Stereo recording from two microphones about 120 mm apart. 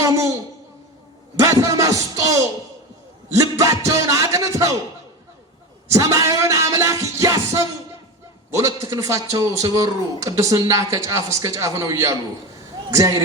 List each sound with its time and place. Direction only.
1.4 s speech: 25° right (ahead or behind)
5.9 s speech: 30° right (ahead or behind)